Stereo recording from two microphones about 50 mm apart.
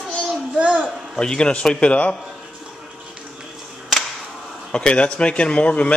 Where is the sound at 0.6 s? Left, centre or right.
Right.